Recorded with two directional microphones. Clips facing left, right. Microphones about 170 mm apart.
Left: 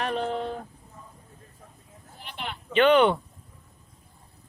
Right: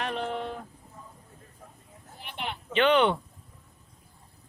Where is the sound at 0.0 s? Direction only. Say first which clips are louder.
Left 3 dB; 40° left (ahead or behind).